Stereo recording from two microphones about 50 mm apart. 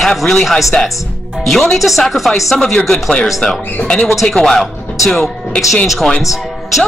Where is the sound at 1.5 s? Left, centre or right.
Centre.